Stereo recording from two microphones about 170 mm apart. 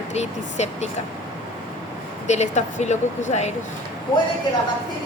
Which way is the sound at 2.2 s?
45° left (ahead or behind).